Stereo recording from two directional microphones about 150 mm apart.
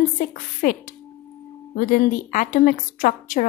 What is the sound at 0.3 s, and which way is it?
Speech, 65° left (ahead or behind).